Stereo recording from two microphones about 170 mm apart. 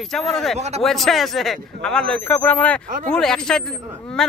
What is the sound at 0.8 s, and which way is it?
A man's voice, centre (ahead or behind).